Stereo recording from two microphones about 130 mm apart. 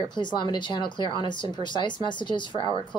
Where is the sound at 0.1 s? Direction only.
35° left (ahead or behind).